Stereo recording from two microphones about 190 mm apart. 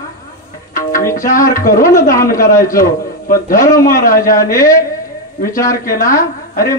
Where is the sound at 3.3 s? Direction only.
45° left (ahead or behind).